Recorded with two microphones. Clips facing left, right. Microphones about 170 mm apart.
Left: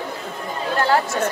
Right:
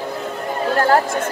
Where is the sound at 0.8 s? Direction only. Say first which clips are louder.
Right 1 dB; 50° right (ahead or behind).